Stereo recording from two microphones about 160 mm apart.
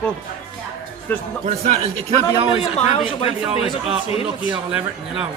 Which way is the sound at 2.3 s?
30° right (ahead or behind).